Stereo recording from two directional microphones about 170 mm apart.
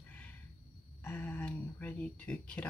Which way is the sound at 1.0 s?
10° left (ahead or behind).